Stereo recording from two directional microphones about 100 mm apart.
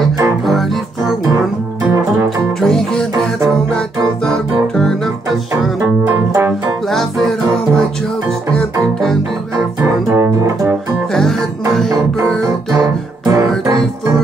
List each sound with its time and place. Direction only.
0.5 s music: centre (ahead or behind)
2.2 s music: 5° left (ahead or behind)
4.3 s music: 5° left (ahead or behind)
6.0 s music: 25° right (ahead or behind)
6.9 s music: 5° left (ahead or behind)
9.8 s music: 30° right (ahead or behind)
12.7 s music: 35° right (ahead or behind)